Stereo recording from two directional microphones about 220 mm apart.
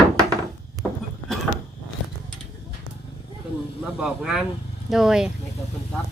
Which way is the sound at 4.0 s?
5° right (ahead or behind).